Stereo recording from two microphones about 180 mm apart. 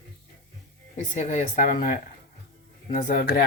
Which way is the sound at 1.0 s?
45° left (ahead or behind).